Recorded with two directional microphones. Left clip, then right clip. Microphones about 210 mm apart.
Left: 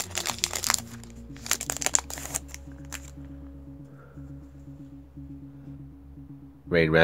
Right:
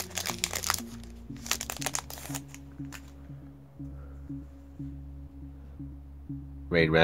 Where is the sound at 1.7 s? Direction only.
20° left (ahead or behind).